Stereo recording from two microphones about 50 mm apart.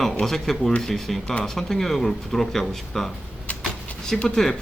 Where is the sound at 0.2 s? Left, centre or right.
Centre.